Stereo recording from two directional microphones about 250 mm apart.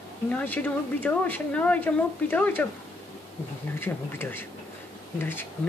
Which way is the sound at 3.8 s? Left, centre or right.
Centre.